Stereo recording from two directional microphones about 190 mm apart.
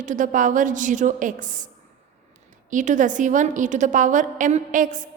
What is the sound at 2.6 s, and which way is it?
A woman's voice, 40° right (ahead or behind).